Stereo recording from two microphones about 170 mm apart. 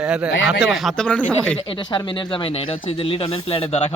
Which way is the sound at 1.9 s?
30° left (ahead or behind).